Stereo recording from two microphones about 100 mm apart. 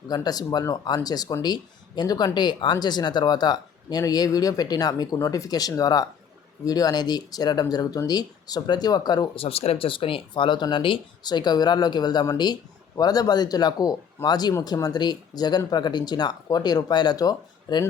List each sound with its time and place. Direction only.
0.1 s speech: 40° left (ahead or behind)
9.3 s speech: 80° left; by 17.8 s 40° left (ahead or behind)